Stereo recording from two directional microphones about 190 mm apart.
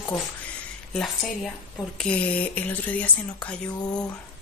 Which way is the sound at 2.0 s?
5° left (ahead or behind).